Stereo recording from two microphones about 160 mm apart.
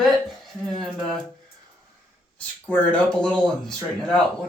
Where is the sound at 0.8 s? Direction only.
5° left (ahead or behind).